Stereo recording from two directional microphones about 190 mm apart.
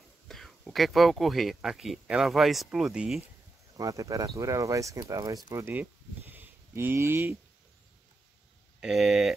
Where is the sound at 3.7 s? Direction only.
20° right (ahead or behind).